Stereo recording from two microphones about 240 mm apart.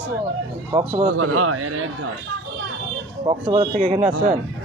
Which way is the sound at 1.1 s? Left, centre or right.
Right.